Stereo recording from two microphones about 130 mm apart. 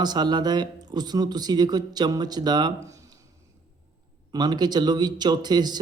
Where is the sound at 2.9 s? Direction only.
25° right (ahead or behind).